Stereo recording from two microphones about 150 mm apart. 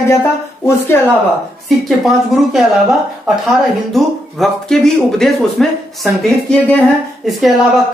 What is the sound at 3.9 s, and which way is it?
Speech, centre (ahead or behind).